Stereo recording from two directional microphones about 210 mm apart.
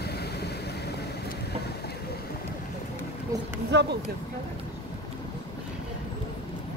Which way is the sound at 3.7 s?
55° right (ahead or behind).